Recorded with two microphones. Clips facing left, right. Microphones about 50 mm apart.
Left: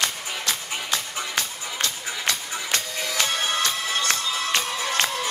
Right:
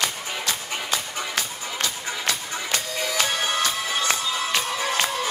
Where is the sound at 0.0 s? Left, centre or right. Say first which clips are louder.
Even; centre.